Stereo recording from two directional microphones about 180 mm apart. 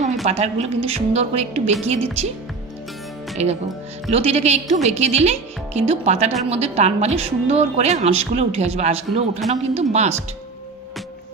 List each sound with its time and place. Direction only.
0.0 s speech: 40° right (ahead or behind)
3.4 s speech: 35° right (ahead or behind)